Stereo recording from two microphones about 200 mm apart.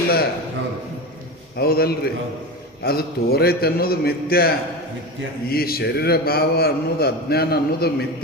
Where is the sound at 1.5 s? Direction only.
50° left (ahead or behind).